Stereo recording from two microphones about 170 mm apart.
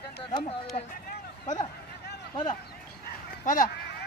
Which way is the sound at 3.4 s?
50° left (ahead or behind).